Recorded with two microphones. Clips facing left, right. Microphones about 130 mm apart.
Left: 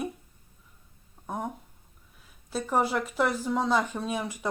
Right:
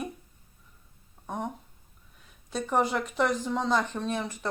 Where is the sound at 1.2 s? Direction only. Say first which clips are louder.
Even; 5° left (ahead or behind).